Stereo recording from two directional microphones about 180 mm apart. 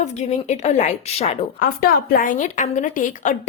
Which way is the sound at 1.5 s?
55° left (ahead or behind).